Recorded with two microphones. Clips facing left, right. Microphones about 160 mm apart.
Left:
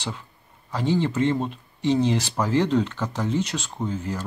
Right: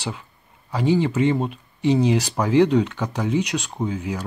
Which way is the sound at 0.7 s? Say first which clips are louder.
Right 3 dB; 10° right (ahead or behind).